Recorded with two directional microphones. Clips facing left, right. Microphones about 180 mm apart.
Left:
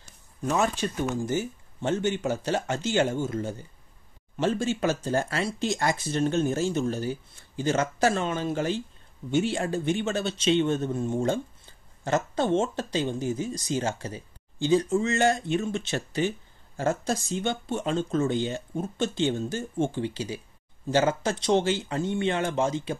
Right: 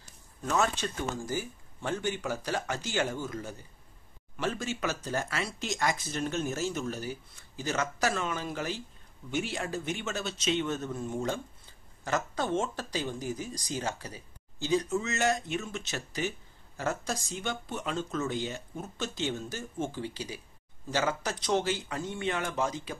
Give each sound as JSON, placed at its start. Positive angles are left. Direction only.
{"t": 0.5, "sound": "speech", "side_deg": 15}